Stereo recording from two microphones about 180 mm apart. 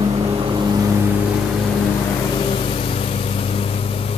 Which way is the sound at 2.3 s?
30° left (ahead or behind).